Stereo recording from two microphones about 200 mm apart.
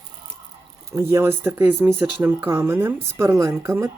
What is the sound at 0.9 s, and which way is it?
Speech, 15° right (ahead or behind).